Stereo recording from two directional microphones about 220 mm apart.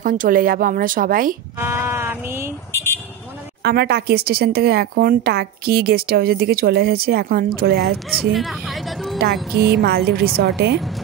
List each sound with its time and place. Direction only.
0.0 s speech: 40° right (ahead or behind)
1.6 s a sound: 10° right (ahead or behind)
3.6 s speech: 45° right (ahead or behind)
8.1 s music: centre (ahead or behind)
9.8 s speech: 45° right (ahead or behind)